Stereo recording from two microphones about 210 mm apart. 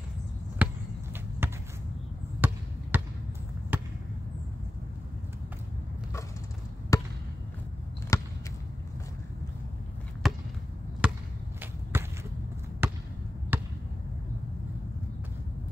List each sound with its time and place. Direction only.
0.6 s a sound: 10° right (ahead or behind)
1.4 s basketball bounce: 10° right (ahead or behind)
6.9 s basketball bounce: 15° left (ahead or behind)
8.1 s a sound: 15° left (ahead or behind)
10.2 s basketball bounce: centre (ahead or behind)
11.6 s whip: 10° right (ahead or behind)
12.8 s basketball bounce: 10° right (ahead or behind)